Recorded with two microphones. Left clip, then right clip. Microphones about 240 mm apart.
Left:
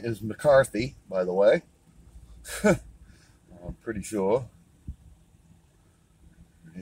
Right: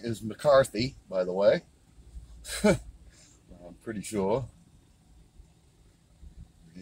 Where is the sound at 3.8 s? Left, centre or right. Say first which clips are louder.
Left 3 dB; left.